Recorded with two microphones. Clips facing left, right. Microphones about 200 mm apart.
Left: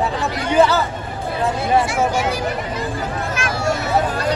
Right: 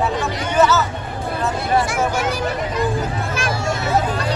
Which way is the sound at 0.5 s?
30° left (ahead or behind).